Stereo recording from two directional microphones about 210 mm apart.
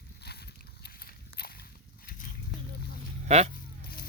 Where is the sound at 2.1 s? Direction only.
40° left (ahead or behind).